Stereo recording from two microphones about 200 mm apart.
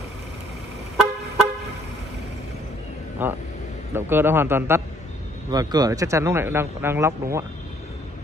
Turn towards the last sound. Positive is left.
turn(degrees=-15)  # may be behind; listen again after turning